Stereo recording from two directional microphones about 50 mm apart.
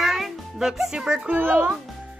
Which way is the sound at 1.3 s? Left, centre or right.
Right.